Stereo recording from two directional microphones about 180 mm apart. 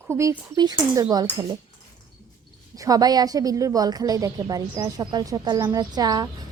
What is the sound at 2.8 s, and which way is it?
A woman's voice, 20° right (ahead or behind).